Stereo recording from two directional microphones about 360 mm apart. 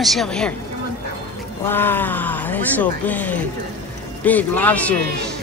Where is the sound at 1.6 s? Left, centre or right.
Centre.